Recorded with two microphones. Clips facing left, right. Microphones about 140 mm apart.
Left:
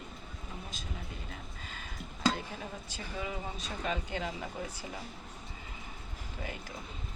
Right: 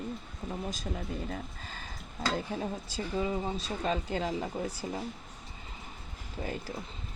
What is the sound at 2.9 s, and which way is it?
Speech, 30° right (ahead or behind).